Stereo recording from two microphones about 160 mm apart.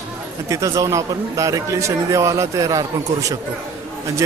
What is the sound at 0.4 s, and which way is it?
A man's voice, 20° right (ahead or behind).